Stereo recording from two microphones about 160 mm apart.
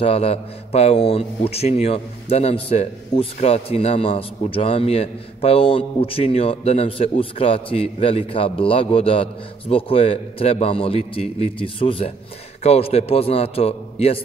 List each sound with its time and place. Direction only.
0.0 s a man's voice: 40° left (ahead or behind)